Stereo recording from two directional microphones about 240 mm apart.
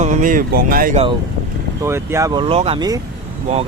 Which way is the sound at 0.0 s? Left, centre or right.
Right.